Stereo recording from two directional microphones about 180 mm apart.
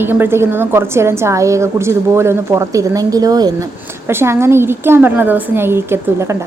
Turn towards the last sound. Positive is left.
turn(degrees=-15)  # may be behind; listen again after turning